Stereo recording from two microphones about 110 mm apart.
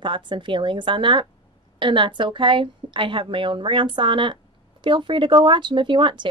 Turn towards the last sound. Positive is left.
turn(degrees=-45)  # may be behind; listen again after turning